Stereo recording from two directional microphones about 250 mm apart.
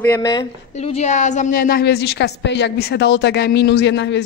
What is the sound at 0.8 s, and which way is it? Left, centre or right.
A woman's voice, left.